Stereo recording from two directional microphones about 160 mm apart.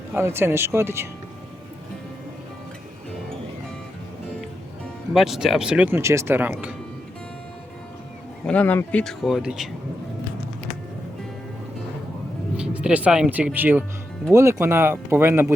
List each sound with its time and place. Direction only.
0.1 s speech: 15° right (ahead or behind)
5.1 s speech: centre (ahead or behind)
8.4 s speech: 10° left (ahead or behind)
12.5 s speech: 5° right (ahead or behind)